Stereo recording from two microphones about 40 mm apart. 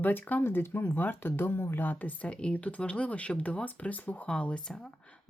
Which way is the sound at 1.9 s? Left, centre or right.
Left.